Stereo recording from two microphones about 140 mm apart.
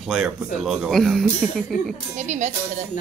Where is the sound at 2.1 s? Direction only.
55° right (ahead or behind).